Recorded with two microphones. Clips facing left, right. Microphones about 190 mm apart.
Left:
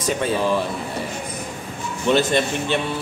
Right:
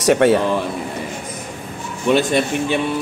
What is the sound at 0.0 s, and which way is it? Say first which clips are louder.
Speech: right 9 dB; 70° right (ahead or behind).